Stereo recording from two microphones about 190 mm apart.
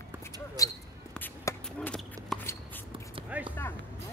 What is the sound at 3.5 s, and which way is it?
Music, 10° left (ahead or behind).